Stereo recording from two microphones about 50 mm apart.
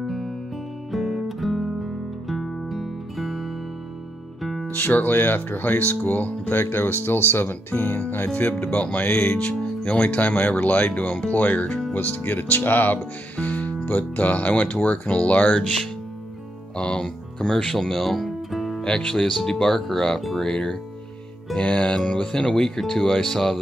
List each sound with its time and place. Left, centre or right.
0.0 s music: centre
4.7 s speech: left
16.7 s music: centre
18.9 s speech: centre
20.4 s speech: centre